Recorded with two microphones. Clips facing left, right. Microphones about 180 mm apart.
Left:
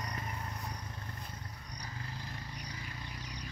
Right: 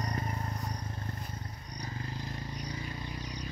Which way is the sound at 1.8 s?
25° right (ahead or behind).